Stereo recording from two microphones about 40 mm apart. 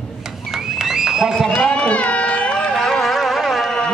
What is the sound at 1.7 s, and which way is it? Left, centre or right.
Run, left.